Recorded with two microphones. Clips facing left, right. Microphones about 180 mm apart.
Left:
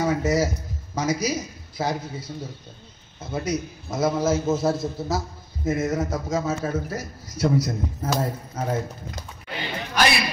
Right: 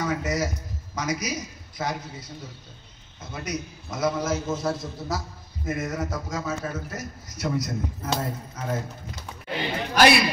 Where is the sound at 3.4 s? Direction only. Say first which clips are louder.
Left 2 dB; 25° left (ahead or behind).